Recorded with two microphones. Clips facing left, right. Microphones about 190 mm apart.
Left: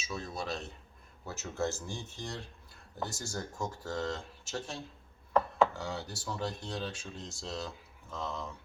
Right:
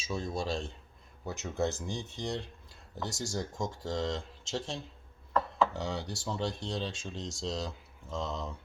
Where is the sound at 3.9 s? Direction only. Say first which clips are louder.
Right 2 dB; 20° right (ahead or behind).